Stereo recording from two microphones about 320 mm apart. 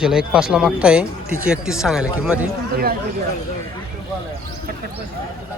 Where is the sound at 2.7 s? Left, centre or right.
Right.